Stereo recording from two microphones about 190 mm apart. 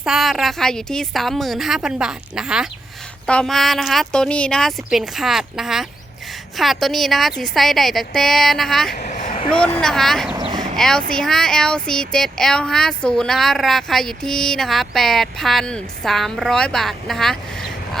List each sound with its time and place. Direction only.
0.0 s speech: centre (ahead or behind)
9.0 s a sound: 40° left (ahead or behind)
9.5 s speech: 5° left (ahead or behind)
10.3 s vehicle: 20° right (ahead or behind)
10.8 s speech: 5° left (ahead or behind)